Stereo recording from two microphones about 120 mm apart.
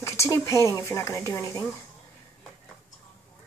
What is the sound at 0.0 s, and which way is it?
Speech, 25° left (ahead or behind).